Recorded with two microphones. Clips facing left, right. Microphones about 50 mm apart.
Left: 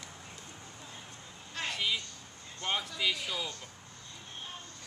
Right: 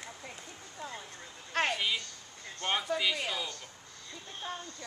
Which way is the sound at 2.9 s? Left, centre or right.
Right.